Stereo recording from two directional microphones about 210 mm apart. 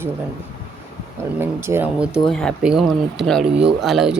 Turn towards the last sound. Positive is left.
turn(degrees=0)  # may be behind; listen again after turning